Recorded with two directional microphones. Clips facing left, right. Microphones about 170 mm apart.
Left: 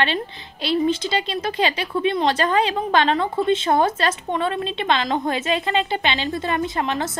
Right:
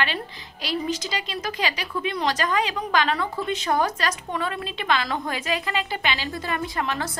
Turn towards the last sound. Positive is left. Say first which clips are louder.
# left 4 dB
turn(degrees=20)  # may be behind; listen again after turning